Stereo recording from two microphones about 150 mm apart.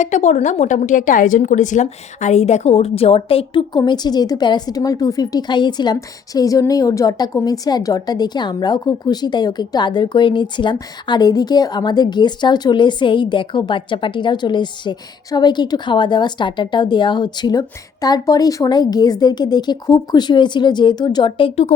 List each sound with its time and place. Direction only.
0.0 s a woman's voice: 50° left (ahead or behind)